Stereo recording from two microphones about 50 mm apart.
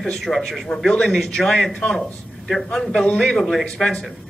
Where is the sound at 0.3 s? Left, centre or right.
Left.